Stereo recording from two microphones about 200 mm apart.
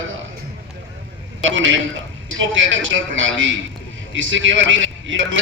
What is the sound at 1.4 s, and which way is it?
A man's voice, 70° right (ahead or behind).